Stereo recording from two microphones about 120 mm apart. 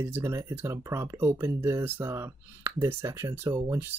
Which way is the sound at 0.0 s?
20° right (ahead or behind).